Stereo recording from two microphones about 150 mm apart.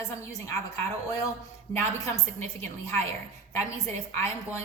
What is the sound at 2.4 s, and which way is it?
Speech, 20° left (ahead or behind).